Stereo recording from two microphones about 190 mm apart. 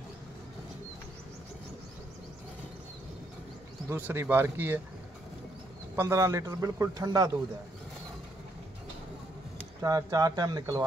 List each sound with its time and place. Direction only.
3.9 s a man's voice: 15° right (ahead or behind)
5.9 s a man's voice: 15° right (ahead or behind)
9.8 s speech: 20° right (ahead or behind)